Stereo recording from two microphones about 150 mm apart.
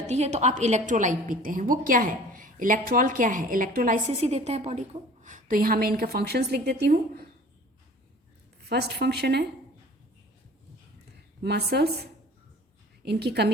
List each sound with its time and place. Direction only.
0.1 s a woman's voice: 45° right (ahead or behind); by 4.0 s 65° right (ahead or behind)
4.2 s a woman's voice: 45° right (ahead or behind)
5.2 s a woman's voice: 60° right (ahead or behind); by 7.3 s 90° right
8.7 s a woman's voice: 90° right
11.5 s a woman's voice: 90° right
13.1 s a woman's voice: 90° right